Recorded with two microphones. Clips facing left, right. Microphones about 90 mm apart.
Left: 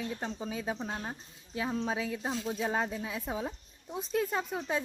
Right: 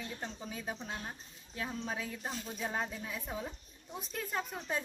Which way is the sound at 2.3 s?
90° left.